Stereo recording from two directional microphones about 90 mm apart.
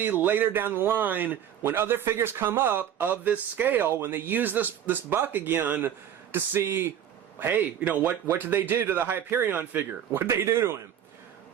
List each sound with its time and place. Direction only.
0.0 s a man's voice: 20° right (ahead or behind)